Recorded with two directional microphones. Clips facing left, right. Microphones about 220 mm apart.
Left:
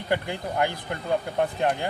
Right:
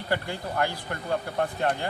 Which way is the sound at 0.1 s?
15° left (ahead or behind).